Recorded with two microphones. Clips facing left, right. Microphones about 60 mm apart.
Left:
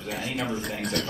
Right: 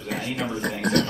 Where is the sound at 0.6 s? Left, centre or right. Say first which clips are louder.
Right 4 dB; right.